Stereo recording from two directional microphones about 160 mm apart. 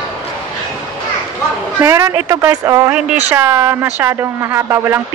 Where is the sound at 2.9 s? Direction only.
10° right (ahead or behind).